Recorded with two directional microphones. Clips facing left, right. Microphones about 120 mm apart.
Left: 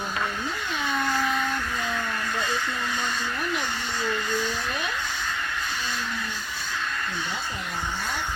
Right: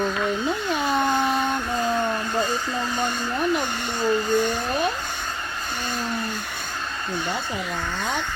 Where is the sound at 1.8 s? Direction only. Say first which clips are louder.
Right 6 dB; 35° right (ahead or behind).